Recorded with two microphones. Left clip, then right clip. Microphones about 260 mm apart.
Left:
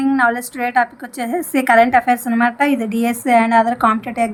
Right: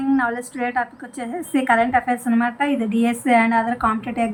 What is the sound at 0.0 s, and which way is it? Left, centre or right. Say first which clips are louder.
A woman's voice: left 5 dB; left.